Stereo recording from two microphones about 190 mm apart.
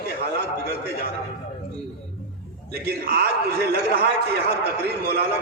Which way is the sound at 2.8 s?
55° right (ahead or behind).